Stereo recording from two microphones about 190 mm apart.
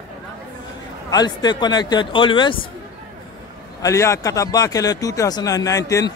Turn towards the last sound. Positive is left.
turn(degrees=15)  # may be behind; listen again after turning